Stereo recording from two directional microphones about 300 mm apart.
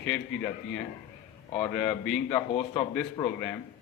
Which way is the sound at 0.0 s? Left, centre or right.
Centre.